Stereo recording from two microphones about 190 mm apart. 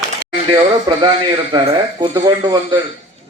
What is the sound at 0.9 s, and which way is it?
A man's voice, 25° right (ahead or behind).